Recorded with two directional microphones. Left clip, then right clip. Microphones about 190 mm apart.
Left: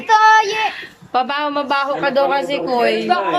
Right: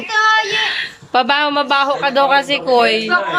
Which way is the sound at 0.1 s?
65° left (ahead or behind).